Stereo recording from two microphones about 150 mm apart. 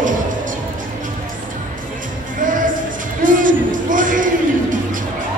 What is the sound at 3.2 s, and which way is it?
Music, 60° right (ahead or behind).